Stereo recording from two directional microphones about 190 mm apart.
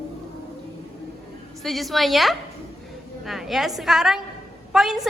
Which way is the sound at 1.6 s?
Centre (ahead or behind).